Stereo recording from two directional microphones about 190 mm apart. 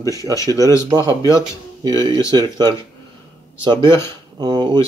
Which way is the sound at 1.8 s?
20° right (ahead or behind).